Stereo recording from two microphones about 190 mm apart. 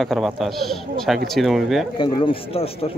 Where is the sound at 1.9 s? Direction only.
25° left (ahead or behind).